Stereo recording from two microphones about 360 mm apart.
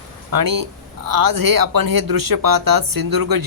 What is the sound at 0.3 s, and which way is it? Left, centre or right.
Speech, right.